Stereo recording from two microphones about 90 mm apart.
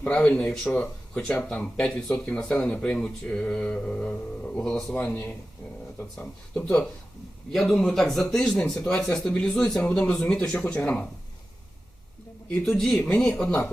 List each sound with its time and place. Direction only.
0.0 s speech: 15° left (ahead or behind)
5.0 s speech: 20° left (ahead or behind)
7.5 s speech: 5° left (ahead or behind)
12.6 s speech: 10° left (ahead or behind)